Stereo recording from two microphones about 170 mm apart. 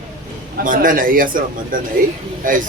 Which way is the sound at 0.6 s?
50° right (ahead or behind).